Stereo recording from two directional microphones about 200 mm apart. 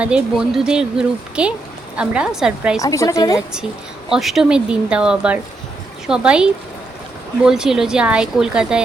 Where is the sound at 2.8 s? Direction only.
15° left (ahead or behind).